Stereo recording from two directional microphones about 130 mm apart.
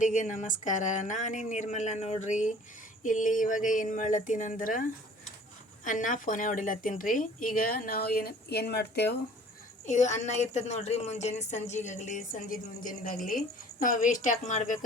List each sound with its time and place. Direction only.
0.0 s a woman's voice: 70° left (ahead or behind); by 7.9 s 90° left
9.8 s a woman's voice: 65° left (ahead or behind)